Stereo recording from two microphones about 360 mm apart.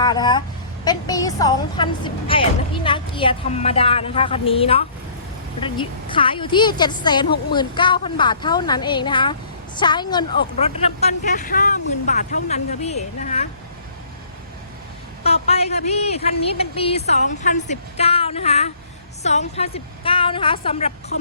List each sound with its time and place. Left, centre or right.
0.0 s a woman's voice: centre
15.2 s a woman's voice: centre